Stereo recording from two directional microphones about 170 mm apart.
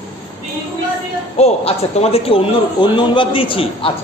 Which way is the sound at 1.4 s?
40° left (ahead or behind).